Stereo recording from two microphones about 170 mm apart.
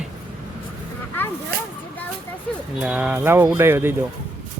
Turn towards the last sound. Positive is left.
turn(degrees=-15)  # may be behind; listen again after turning